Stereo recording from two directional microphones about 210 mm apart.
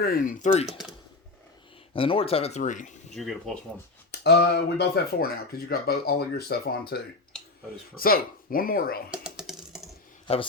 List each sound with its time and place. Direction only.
0.0 s speech: 40° left (ahead or behind)
1.9 s speech: 25° left (ahead or behind)
3.2 s speech: centre (ahead or behind)
4.1 s speech: 55° left (ahead or behind)
9.0 s typing: 5° right (ahead or behind)